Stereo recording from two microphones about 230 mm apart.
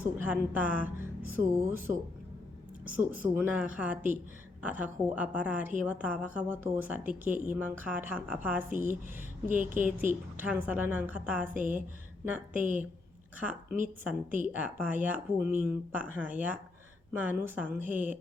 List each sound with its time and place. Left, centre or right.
0.0 s speech: centre
2.9 s a woman's voice: centre